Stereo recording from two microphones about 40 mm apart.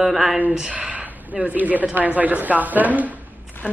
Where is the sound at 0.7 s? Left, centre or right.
Right.